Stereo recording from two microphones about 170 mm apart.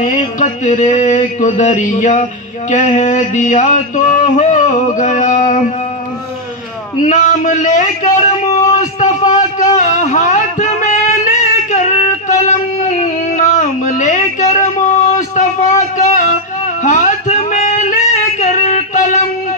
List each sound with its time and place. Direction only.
0.0 s mantra: 45° left (ahead or behind)
7.0 s a man's voice: 45° left (ahead or behind)
9.3 s a sound: 40° left (ahead or behind)
16.8 s music: 50° left (ahead or behind)